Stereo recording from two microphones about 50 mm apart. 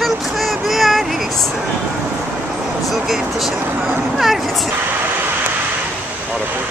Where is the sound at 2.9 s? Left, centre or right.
Centre.